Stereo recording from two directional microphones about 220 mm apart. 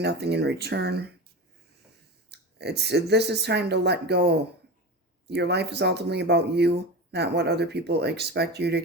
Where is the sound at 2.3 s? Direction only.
50° right (ahead or behind).